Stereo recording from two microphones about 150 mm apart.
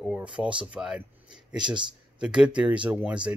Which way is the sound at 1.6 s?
30° right (ahead or behind).